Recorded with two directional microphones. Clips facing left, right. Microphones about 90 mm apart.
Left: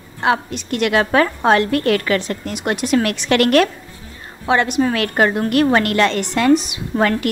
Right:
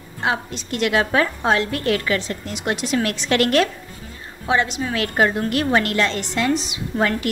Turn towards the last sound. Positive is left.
turn(degrees=65)  # may be behind; listen again after turning